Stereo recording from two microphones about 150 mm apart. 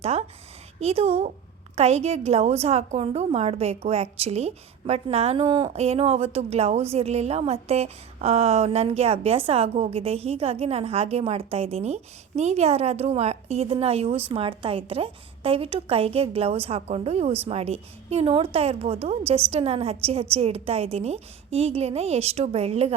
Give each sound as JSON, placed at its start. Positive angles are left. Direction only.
{"t": 0.0, "sound": "a woman's voice", "side_deg": -45}